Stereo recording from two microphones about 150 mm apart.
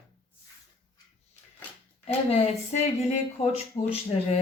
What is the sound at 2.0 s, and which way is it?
A woman's voice, 45° left (ahead or behind).